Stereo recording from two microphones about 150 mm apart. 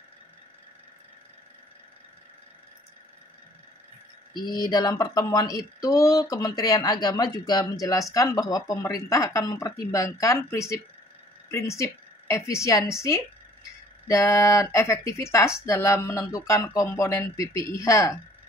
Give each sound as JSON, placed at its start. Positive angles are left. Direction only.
{"t": 4.3, "sound": "a woman's voice", "side_deg": 25}
{"t": 14.0, "sound": "speech", "side_deg": 20}